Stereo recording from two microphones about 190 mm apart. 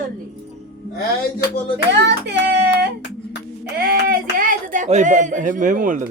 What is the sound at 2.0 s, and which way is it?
Child singing, 65° right (ahead or behind).